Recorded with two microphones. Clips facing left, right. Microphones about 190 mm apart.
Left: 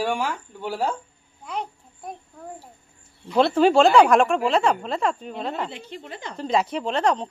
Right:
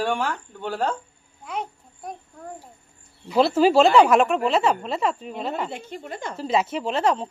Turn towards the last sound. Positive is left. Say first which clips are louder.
# even
turn(degrees=-5)  # may be behind; listen again after turning